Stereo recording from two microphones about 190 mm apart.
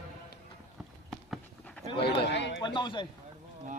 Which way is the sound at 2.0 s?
60° left (ahead or behind).